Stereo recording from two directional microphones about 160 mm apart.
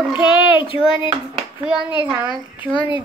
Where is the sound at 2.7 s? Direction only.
30° left (ahead or behind).